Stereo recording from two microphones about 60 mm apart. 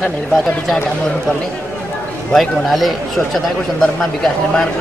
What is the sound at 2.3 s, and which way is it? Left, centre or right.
A man's voice, centre.